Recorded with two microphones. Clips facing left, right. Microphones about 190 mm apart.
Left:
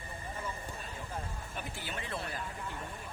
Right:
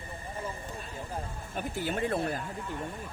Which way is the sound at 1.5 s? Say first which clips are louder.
Right 11 dB; 45° right (ahead or behind).